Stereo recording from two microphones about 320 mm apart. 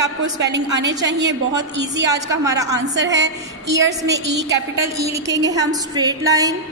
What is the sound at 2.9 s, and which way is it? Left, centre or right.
A woman's voice, right.